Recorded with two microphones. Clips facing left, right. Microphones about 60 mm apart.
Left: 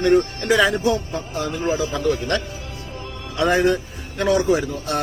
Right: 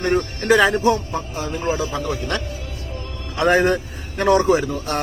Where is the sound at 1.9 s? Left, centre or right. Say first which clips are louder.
Left 3 dB; centre.